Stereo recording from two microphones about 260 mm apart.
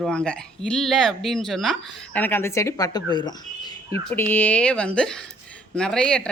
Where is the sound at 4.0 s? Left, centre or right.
Centre.